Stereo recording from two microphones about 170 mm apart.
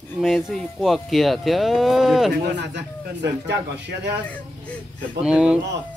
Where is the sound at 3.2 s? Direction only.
90° right.